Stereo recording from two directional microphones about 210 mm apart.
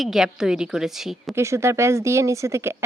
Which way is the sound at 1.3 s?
15° right (ahead or behind).